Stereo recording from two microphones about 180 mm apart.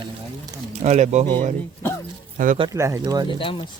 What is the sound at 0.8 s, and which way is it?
Speech, 40° right (ahead or behind).